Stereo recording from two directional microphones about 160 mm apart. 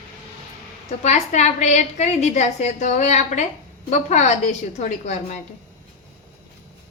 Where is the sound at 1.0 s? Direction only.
45° left (ahead or behind).